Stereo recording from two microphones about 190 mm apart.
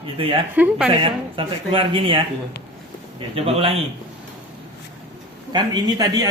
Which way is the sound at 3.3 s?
30° right (ahead or behind).